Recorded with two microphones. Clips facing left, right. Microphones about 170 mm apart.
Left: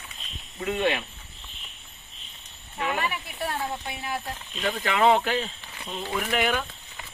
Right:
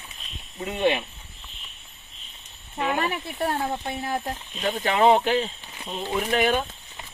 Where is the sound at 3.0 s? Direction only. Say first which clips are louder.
Right 4 dB; 45° right (ahead or behind).